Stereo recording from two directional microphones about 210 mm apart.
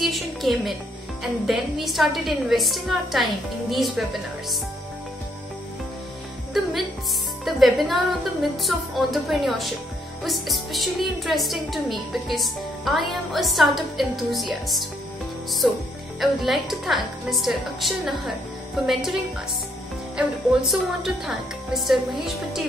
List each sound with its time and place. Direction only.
0.0 s a woman's voice: centre (ahead or behind)
7.4 s a woman's voice: centre (ahead or behind)
20.2 s a woman's voice: centre (ahead or behind)